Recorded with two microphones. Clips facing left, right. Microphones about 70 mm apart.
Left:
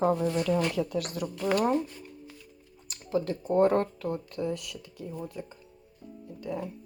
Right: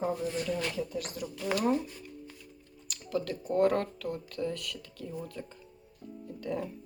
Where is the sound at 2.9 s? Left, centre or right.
Left.